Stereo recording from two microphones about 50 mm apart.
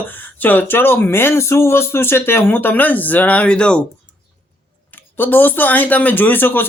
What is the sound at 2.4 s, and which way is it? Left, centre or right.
Speech, left.